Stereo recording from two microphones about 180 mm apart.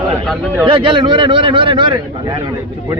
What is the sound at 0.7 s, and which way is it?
A man's voice, 30° right (ahead or behind).